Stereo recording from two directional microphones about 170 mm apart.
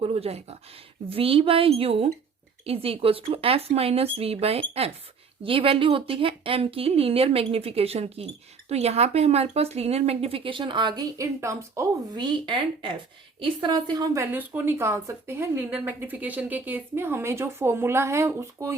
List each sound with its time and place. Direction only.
0.0 s a woman's voice: 35° right (ahead or behind); by 18.8 s 15° right (ahead or behind)